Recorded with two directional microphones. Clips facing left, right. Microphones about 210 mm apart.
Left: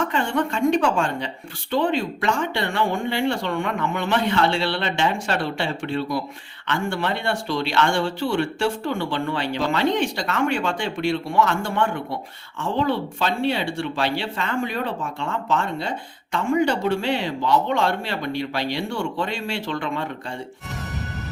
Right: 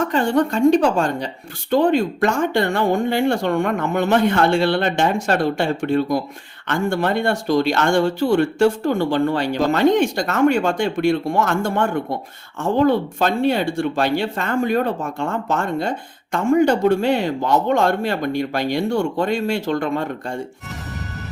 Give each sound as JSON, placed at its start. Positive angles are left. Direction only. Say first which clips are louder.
{"t": 0.0, "sound": "a woman's voice", "louder": "right 5 dB", "side_deg": -40}